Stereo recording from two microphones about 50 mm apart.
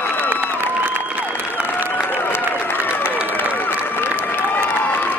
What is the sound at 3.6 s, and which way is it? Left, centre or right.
Run, left.